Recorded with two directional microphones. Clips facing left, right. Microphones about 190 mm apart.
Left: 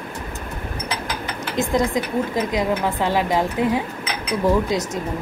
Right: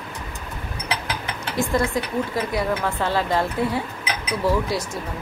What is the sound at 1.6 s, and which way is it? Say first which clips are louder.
Speech: left 2 dB; 15° left (ahead or behind).